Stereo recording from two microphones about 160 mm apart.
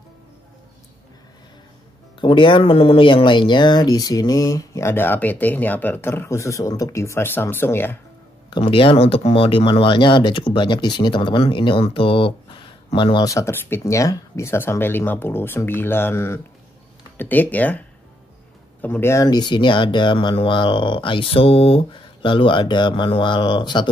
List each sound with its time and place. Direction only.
2.1 s speech: 30° left (ahead or behind); by 8.0 s 15° left (ahead or behind)
8.5 s speech: 30° left (ahead or behind); by 19.2 s 15° left (ahead or behind)
19.2 s speech: 25° left (ahead or behind)